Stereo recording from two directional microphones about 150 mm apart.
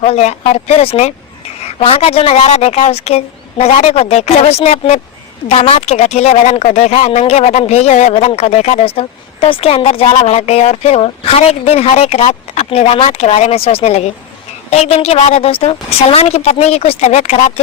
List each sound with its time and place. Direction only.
0.0 s speech: 45° left (ahead or behind)